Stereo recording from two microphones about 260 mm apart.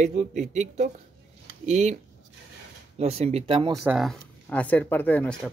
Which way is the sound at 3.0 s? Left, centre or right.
Right.